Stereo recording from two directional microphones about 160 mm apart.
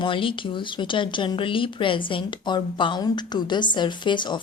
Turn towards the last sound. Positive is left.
turn(degrees=30)  # may be behind; listen again after turning